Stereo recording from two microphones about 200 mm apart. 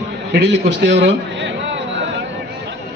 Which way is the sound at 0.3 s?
60° right (ahead or behind).